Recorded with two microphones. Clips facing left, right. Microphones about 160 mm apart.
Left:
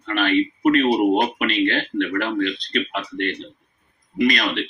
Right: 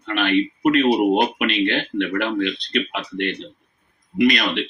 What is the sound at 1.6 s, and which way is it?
Speech, 20° right (ahead or behind).